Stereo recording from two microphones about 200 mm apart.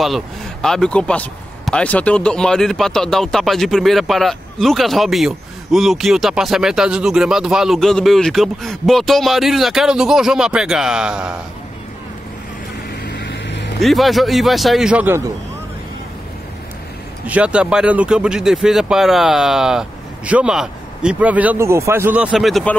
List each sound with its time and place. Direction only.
0.0 s speech: centre (ahead or behind)
13.0 s vehicle: 60° left (ahead or behind)
13.7 s speech: centre (ahead or behind)
17.3 s speech: 5° right (ahead or behind)